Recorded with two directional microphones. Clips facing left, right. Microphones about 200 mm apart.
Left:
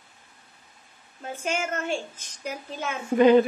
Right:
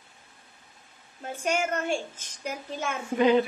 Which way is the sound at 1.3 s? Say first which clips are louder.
Right 1 dB; 45° right (ahead or behind).